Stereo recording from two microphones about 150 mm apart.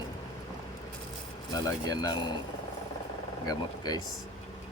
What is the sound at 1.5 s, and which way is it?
Speech, 25° left (ahead or behind).